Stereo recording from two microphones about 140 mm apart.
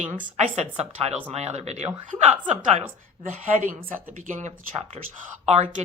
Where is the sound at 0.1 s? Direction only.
60° right (ahead or behind).